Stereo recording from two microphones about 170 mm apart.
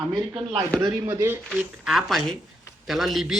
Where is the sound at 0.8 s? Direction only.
20° right (ahead or behind).